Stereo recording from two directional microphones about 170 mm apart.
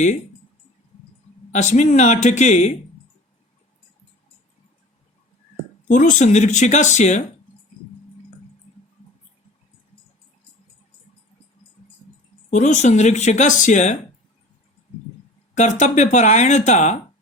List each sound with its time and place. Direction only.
1.5 s speech: 45° left (ahead or behind)
5.9 s speech: 50° left (ahead or behind)
12.5 s speech: 45° left (ahead or behind)
15.5 s speech: 45° left (ahead or behind)